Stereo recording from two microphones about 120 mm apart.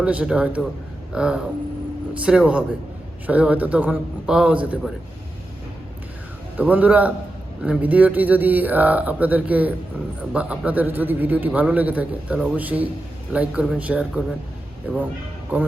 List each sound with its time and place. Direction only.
0.0 s a man's voice: 10° right (ahead or behind)
6.6 s a man's voice: 15° right (ahead or behind)